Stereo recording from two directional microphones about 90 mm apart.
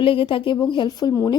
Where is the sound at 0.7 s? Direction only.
55° left (ahead or behind).